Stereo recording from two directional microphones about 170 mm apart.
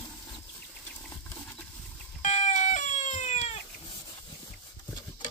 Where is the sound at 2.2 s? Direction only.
45° left (ahead or behind).